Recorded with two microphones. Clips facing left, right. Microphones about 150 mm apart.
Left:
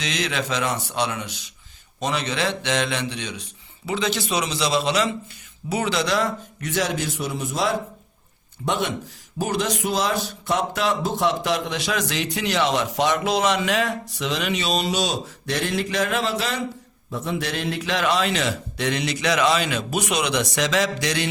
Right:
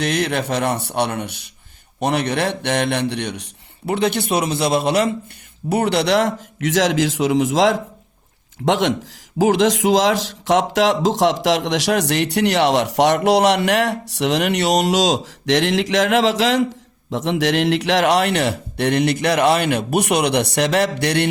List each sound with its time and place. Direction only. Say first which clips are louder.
0.0 s a man's voice: right 6 dB; 60° right (ahead or behind)